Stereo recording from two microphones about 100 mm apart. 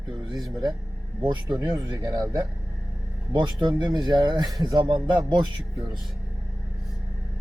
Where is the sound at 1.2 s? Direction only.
50° right (ahead or behind).